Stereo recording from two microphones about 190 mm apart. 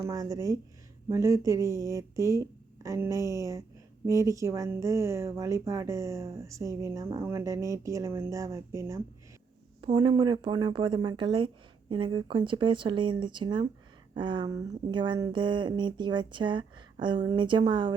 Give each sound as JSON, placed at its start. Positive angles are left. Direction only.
{"t": 0.0, "sound": "speech", "side_deg": -20}